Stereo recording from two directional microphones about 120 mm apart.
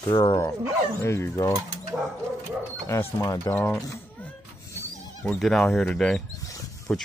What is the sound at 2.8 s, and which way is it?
Speech, 25° left (ahead or behind).